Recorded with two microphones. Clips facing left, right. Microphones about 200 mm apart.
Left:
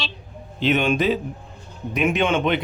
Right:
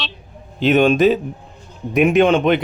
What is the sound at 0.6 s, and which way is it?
Speech, 45° right (ahead or behind).